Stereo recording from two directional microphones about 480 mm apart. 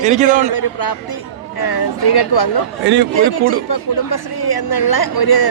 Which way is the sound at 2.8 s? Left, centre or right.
Right.